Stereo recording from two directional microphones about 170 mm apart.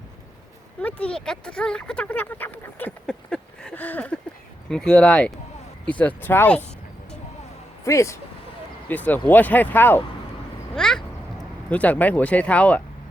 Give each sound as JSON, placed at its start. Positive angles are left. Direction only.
{"t": 0.8, "sound": "speech", "side_deg": 5}
{"t": 7.9, "sound": "speech", "side_deg": 15}
{"t": 10.8, "sound": "a sound", "side_deg": 5}
{"t": 11.7, "sound": "speech", "side_deg": 10}